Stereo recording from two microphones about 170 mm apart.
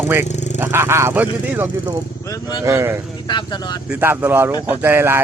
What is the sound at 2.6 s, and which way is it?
Speech, 15° right (ahead or behind).